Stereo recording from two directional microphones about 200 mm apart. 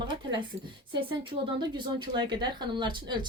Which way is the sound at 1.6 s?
20° right (ahead or behind).